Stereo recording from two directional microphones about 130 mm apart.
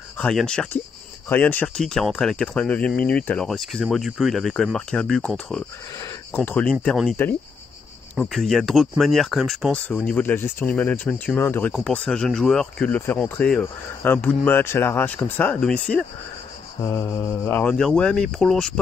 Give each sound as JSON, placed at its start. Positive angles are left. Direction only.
{"t": 0.2, "sound": "speech", "side_deg": 5}
{"t": 8.2, "sound": "speech", "side_deg": 5}
{"t": 9.9, "sound": "speech", "side_deg": 15}
{"t": 17.5, "sound": "speech", "side_deg": 15}